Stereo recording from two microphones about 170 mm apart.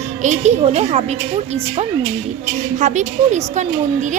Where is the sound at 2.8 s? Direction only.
45° right (ahead or behind).